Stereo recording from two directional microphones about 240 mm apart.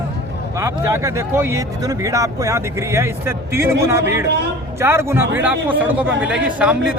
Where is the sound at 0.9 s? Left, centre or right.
Centre.